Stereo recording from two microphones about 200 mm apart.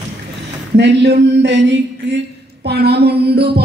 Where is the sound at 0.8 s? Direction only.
60° right (ahead or behind).